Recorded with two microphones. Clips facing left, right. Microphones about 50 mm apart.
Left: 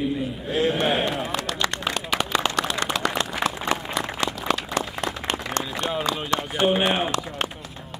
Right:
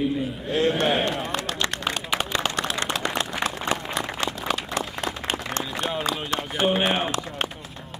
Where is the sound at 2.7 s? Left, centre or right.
Right.